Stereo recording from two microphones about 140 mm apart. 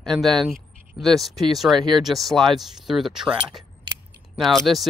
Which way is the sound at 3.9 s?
35° right (ahead or behind).